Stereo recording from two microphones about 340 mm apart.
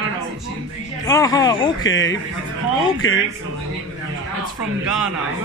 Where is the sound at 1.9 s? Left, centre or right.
Left.